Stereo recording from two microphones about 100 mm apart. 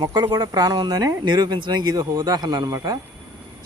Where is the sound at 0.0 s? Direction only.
45° right (ahead or behind).